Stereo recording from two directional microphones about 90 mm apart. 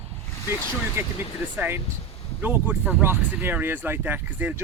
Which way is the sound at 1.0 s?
30° right (ahead or behind).